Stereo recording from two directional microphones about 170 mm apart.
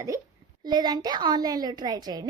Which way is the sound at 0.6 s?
25° right (ahead or behind).